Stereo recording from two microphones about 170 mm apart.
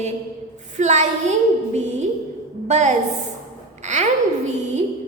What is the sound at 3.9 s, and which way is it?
Babbling, 45° right (ahead or behind).